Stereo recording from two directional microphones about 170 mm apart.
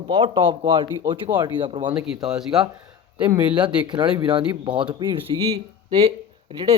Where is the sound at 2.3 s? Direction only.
5° right (ahead or behind).